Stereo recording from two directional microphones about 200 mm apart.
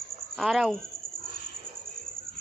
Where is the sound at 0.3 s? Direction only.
Centre (ahead or behind).